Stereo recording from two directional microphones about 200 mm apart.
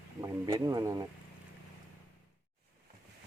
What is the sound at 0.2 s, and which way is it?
Speech, 20° right (ahead or behind).